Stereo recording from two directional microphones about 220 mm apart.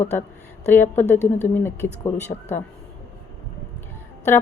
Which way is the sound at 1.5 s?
10° left (ahead or behind).